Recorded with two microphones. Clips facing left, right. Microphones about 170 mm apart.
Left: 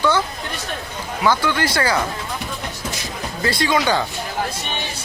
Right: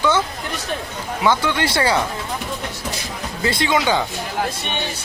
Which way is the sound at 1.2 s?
20° right (ahead or behind).